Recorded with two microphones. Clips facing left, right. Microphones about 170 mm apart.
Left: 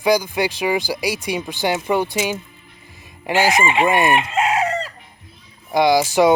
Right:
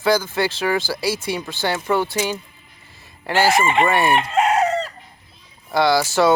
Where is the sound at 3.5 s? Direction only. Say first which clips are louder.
Right 1 dB; centre (ahead or behind).